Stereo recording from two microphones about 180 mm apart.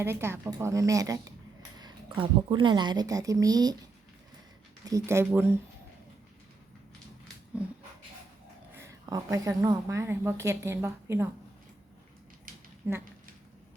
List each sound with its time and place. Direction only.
0.0 s a woman's voice: 15° right (ahead or behind)
4.9 s a woman's voice: 15° right (ahead or behind)
8.7 s a woman's voice: 15° right (ahead or behind)
12.5 s a sound: 50° right (ahead or behind)
12.8 s a woman's voice: 15° right (ahead or behind)